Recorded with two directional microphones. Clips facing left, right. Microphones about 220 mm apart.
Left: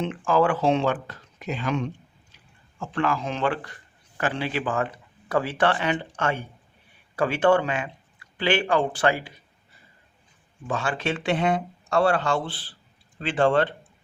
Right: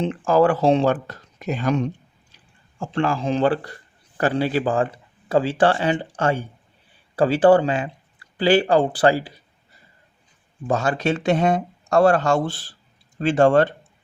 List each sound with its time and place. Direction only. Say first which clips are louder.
0.0 s speech: right 4 dB; 40° right (ahead or behind)
10.7 s speech: right 6 dB; 40° right (ahead or behind)